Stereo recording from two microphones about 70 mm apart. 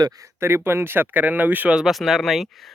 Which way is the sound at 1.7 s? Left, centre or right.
Centre.